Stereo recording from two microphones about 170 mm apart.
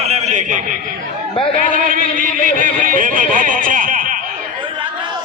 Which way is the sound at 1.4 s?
30° left (ahead or behind).